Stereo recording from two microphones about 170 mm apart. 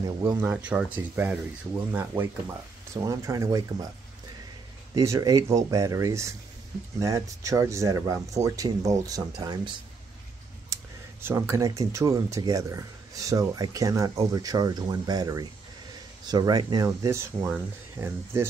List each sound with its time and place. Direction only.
0.0 s speech: 20° right (ahead or behind)
4.9 s speech: 20° right (ahead or behind)